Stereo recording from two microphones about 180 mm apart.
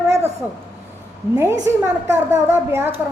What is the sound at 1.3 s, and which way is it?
A woman's voice, 15° right (ahead or behind).